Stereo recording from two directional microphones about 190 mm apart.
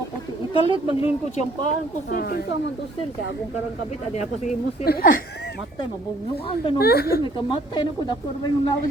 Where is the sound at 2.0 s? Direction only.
55° left (ahead or behind).